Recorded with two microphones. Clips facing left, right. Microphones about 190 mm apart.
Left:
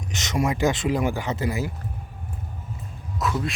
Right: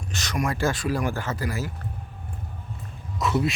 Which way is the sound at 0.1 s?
20° left (ahead or behind).